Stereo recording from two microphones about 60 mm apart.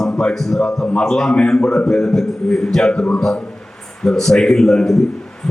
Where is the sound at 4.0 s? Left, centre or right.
Centre.